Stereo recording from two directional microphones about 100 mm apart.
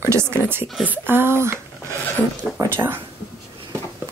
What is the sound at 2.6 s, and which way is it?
Speech, 20° right (ahead or behind).